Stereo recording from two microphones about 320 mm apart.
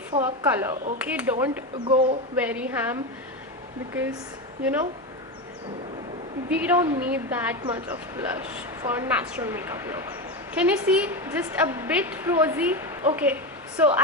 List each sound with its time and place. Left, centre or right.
0.1 s a woman's voice: centre
0.4 s a woman's voice: centre
2.4 s a woman's voice: centre
4.6 s a woman's voice: centre
6.5 s a woman's voice: centre